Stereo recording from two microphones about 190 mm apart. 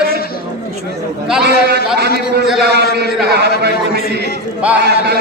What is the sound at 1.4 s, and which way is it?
Speech, 60° right (ahead or behind).